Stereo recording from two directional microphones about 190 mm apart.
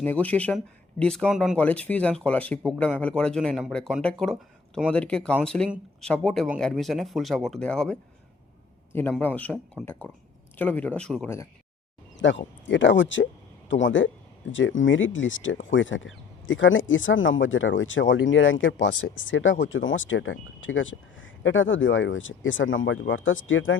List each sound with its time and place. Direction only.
0.0 s speech: 10° left (ahead or behind)
12.6 s speech: 75° left (ahead or behind); by 23.7 s 90° left